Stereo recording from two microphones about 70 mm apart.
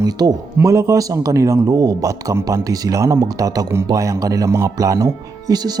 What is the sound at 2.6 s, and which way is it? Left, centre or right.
Speech, right.